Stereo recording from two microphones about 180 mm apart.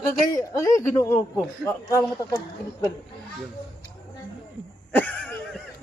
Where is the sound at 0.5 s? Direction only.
15° left (ahead or behind).